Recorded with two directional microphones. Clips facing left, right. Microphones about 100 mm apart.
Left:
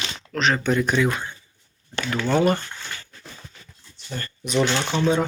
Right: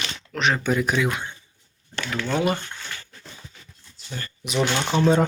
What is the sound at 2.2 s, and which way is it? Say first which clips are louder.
Speech: left 4 dB; 5° left (ahead or behind).